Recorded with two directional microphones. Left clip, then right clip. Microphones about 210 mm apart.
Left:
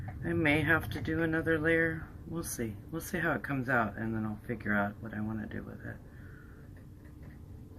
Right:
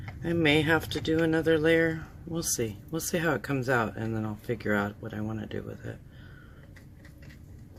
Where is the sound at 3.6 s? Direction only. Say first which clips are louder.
Right 1 dB; 55° right (ahead or behind).